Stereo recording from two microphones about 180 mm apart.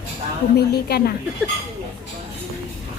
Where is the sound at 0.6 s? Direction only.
60° left (ahead or behind).